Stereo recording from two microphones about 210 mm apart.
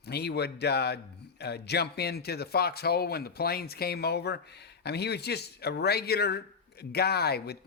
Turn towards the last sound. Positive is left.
turn(degrees=50)  # may be behind; listen again after turning